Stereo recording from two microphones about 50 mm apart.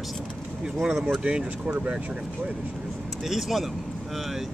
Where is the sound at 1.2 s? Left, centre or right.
Right.